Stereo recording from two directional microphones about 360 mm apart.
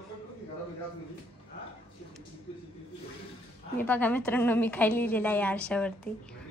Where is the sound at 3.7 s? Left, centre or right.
Centre.